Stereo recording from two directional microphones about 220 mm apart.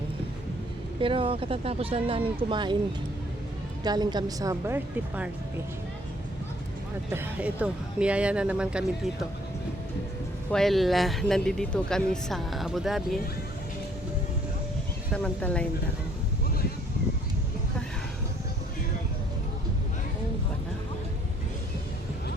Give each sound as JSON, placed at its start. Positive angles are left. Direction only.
{"t": 1.0, "sound": "speech", "side_deg": -25}
{"t": 3.8, "sound": "a woman's voice", "side_deg": -20}
{"t": 7.1, "sound": "speech", "side_deg": -10}
{"t": 10.5, "sound": "speech", "side_deg": 0}
{"t": 15.1, "sound": "speech", "side_deg": 5}